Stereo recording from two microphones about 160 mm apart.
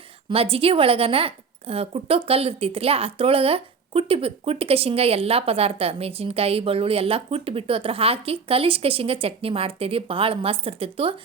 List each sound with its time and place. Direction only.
0.3 s a woman's voice: 35° right (ahead or behind)